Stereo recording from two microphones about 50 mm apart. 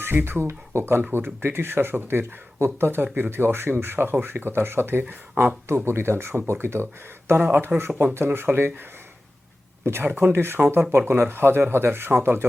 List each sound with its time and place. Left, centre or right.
0.0 s speech: right
1.1 s speech: right
7.3 s speech: right
7.8 s speech: right
10.0 s speech: right
10.3 s speech: right